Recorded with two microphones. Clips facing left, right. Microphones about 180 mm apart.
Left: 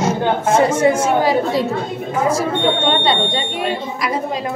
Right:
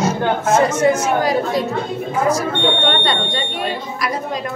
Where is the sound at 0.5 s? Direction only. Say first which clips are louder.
Left 1 dB; 30° left (ahead or behind).